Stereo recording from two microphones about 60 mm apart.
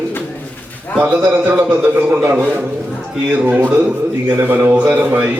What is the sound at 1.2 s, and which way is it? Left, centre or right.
A man's voice, right.